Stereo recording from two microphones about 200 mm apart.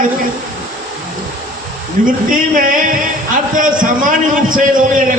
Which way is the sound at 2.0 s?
40° right (ahead or behind).